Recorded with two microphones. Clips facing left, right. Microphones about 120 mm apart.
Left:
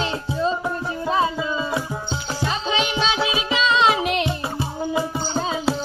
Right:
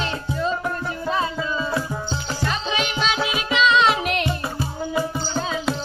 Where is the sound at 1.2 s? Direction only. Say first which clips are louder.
Left 2 dB; 15° left (ahead or behind).